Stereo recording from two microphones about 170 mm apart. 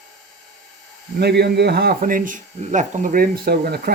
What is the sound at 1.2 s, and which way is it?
Speech, 80° right.